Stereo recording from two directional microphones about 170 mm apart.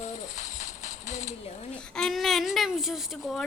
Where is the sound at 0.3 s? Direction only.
45° left (ahead or behind).